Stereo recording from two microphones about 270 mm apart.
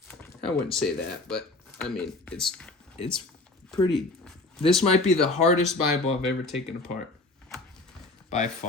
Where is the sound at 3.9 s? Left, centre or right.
Centre.